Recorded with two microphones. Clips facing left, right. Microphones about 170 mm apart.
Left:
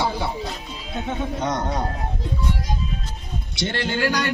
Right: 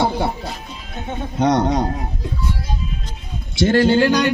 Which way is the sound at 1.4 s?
70° right (ahead or behind).